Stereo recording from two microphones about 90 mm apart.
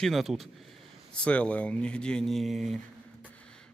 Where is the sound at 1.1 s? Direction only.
10° left (ahead or behind).